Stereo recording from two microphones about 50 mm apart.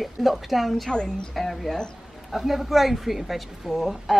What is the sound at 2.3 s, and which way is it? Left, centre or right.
A woman's voice, centre.